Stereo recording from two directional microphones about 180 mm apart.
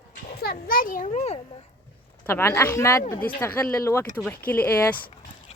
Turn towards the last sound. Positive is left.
turn(degrees=10)  # may be behind; listen again after turning